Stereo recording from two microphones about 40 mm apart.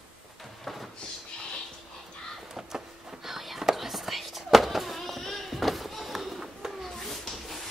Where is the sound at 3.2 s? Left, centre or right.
Centre.